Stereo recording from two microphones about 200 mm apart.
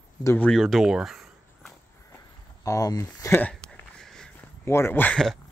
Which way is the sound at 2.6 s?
15° left (ahead or behind).